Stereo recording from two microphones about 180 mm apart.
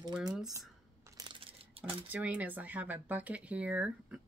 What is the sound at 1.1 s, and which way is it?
Crumpling, 25° right (ahead or behind).